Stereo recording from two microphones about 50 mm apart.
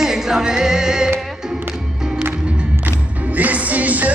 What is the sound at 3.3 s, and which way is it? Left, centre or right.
Music, right.